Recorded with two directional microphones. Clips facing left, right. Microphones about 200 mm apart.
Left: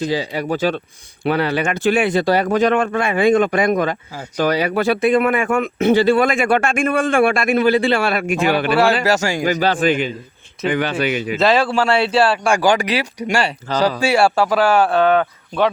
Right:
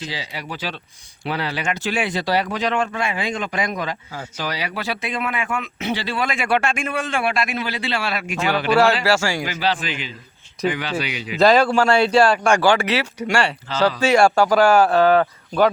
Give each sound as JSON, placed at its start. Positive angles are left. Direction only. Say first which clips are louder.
{"t": 0.0, "sound": "speech", "louder": "left 11 dB", "side_deg": 50}
{"t": 9.0, "sound": "a man's voice", "louder": "left 2 dB", "side_deg": 20}
{"t": 9.4, "sound": "speech", "louder": "left 7 dB", "side_deg": 45}
{"t": 11.3, "sound": "speech", "louder": "right 2 dB", "side_deg": 5}
{"t": 13.7, "sound": "speech", "louder": "left 5 dB", "side_deg": 45}
{"t": 14.0, "sound": "speech", "louder": "right 2 dB", "side_deg": 5}